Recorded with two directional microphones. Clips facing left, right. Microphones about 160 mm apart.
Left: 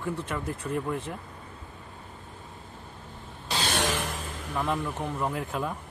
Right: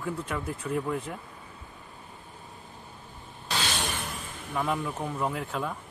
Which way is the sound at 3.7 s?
85° left.